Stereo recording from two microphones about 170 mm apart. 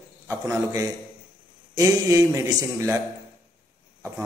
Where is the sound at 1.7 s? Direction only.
20° right (ahead or behind).